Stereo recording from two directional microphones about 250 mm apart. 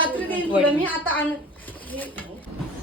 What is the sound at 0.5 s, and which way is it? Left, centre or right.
Speech, centre.